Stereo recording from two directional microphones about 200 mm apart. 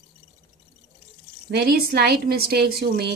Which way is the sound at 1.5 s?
50° right (ahead or behind).